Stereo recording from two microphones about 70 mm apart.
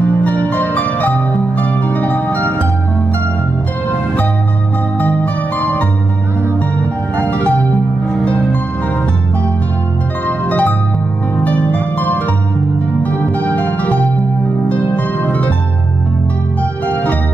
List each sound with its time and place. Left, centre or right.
0.2 s harp: left
5.0 s music: left
7.2 s music: left
10.2 s harp: left
13.4 s music: left
15.2 s music: left
16.8 s music: left